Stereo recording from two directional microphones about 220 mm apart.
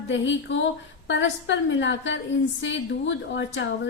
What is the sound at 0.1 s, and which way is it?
A woman's voice, 55° left (ahead or behind).